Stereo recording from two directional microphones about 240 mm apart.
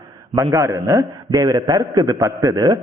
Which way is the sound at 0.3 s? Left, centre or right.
Centre.